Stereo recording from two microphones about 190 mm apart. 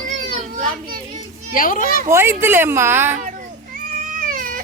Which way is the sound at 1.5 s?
45° left (ahead or behind).